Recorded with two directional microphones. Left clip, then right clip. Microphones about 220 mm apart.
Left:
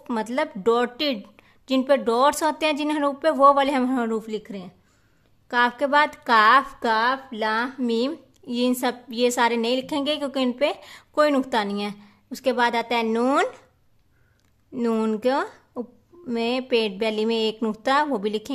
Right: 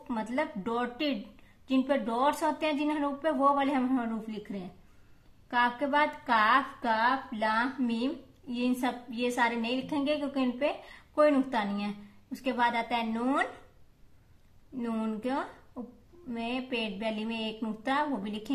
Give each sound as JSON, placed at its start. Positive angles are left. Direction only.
{"t": 0.1, "sound": "a woman's voice", "side_deg": 55}
{"t": 14.8, "sound": "a woman's voice", "side_deg": 55}